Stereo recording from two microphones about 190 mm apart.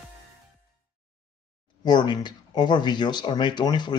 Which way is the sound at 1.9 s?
25° left (ahead or behind).